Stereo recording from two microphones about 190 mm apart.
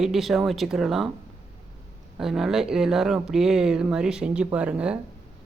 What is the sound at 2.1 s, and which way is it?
Speech, centre (ahead or behind).